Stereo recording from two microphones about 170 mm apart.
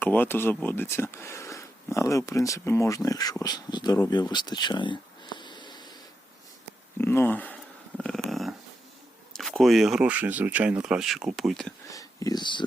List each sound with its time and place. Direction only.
0.0 s speech: 10° left (ahead or behind)
4.1 s a sound: 25° left (ahead or behind)
7.0 s speech: 10° left (ahead or behind)
8.3 s dog: centre (ahead or behind)
9.3 s speech: centre (ahead or behind)
11.9 s speech: 20° left (ahead or behind)